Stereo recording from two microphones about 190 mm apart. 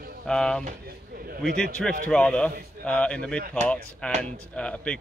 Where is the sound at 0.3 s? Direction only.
5° left (ahead or behind).